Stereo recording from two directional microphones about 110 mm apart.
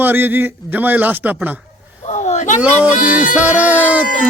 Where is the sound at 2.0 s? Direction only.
90° left.